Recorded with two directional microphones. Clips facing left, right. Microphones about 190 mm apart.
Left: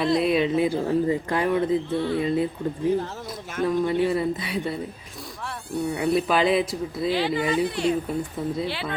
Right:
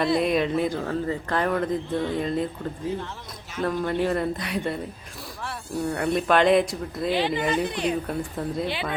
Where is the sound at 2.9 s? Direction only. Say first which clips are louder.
Left 6 dB; 40° left (ahead or behind).